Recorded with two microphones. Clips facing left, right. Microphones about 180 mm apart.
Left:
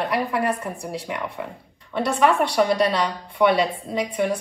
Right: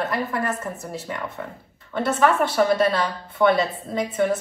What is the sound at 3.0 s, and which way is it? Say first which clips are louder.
Speech: even; 15° left (ahead or behind).